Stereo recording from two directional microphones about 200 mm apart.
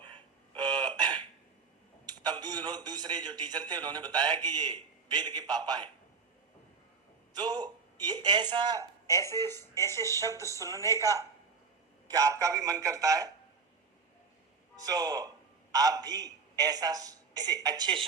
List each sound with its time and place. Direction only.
0.5 s hiccup: 20° right (ahead or behind)
2.0 s a man's voice: 20° right (ahead or behind)
7.3 s speech: 20° right (ahead or behind)
9.0 s speech: 15° left (ahead or behind)
9.6 s a man's voice: 15° right (ahead or behind)
9.9 s speech: 15° left (ahead or behind)
10.2 s a man's voice: 15° right (ahead or behind)
10.4 s speech: 15° left (ahead or behind)
10.9 s a man's voice: 15° right (ahead or behind)
14.8 s a woman's voice: 20° right (ahead or behind)